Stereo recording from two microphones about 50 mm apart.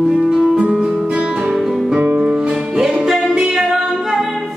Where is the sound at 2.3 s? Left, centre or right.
Centre.